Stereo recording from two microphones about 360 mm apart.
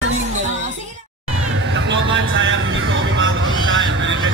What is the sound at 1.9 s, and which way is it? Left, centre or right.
Vehicle, right.